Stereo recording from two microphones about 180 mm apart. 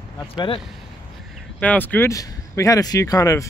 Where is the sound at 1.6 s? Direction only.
10° left (ahead or behind).